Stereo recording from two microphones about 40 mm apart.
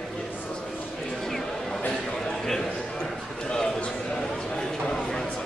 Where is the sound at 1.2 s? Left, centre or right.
Centre.